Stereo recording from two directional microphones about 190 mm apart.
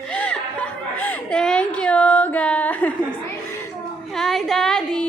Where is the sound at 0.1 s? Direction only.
5° left (ahead or behind).